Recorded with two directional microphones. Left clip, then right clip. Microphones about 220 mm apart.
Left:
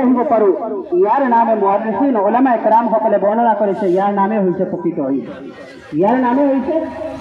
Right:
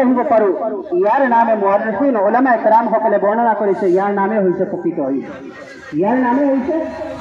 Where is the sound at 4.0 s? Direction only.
50° left (ahead or behind).